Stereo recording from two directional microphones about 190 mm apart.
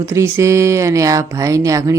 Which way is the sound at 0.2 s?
15° right (ahead or behind).